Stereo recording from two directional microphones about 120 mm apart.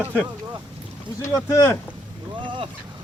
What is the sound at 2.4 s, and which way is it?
Boat, 45° right (ahead or behind).